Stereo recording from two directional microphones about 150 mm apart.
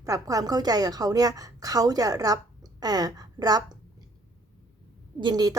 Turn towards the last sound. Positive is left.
turn(degrees=-25)  # may be behind; listen again after turning